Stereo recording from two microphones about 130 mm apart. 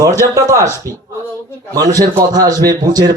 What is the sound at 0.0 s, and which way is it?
Speech, 25° right (ahead or behind).